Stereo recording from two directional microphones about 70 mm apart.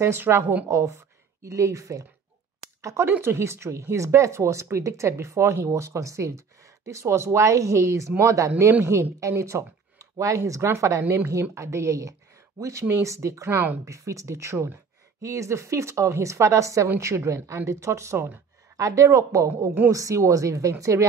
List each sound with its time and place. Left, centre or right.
0.0 s a woman's voice: right
0.7 s speech: right
13.8 s speech: right